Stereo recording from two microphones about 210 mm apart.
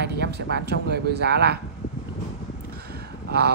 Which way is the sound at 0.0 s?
50° right (ahead or behind).